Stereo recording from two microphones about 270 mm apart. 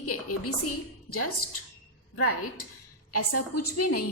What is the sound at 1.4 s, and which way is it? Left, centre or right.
Speech, left.